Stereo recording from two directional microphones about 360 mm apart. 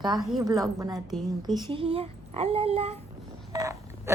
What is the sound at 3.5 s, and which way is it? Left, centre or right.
Telephone dialing, centre.